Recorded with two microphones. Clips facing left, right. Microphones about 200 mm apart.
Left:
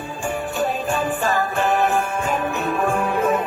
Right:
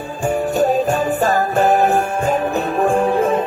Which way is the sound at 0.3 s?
40° right (ahead or behind).